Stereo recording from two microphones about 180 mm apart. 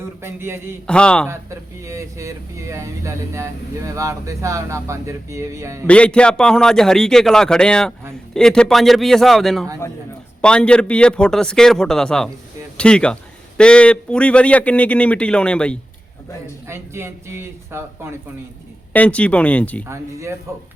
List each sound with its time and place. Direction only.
0.2 s speech: 15° right (ahead or behind)
0.9 s a man's voice: 5° left (ahead or behind)
1.3 s speech: 15° right (ahead or behind)
5.8 s a man's voice: 5° left (ahead or behind)
16.6 s speech: 15° right (ahead or behind)
18.9 s a man's voice: 5° left (ahead or behind)
19.9 s speech: 15° right (ahead or behind)